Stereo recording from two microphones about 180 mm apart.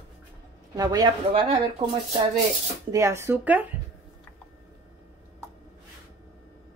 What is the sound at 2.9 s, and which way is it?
Speech, 15° right (ahead or behind).